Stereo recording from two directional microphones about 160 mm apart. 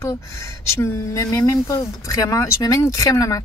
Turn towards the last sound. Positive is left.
turn(degrees=20)  # may be behind; listen again after turning